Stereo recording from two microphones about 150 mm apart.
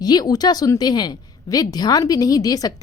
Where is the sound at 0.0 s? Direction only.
25° left (ahead or behind).